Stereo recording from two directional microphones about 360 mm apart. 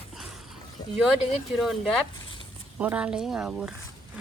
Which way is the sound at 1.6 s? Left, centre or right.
Centre.